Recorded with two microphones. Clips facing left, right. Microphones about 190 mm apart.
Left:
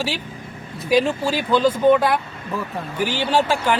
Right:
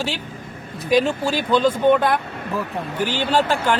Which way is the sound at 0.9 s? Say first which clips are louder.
Even; 5° left (ahead or behind).